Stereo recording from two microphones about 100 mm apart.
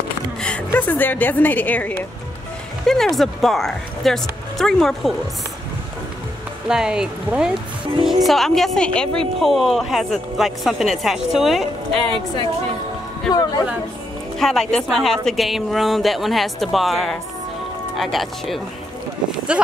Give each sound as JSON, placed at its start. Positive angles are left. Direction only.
{"t": 0.4, "sound": "a woman's voice", "side_deg": 10}
{"t": 2.9, "sound": "a woman's voice", "side_deg": 5}
{"t": 6.7, "sound": "a woman's voice", "side_deg": -5}
{"t": 13.3, "sound": "speech", "side_deg": 40}
{"t": 14.4, "sound": "a woman's voice", "side_deg": 5}